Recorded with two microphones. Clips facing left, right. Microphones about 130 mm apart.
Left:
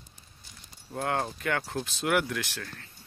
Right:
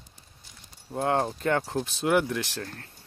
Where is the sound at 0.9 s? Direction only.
25° right (ahead or behind).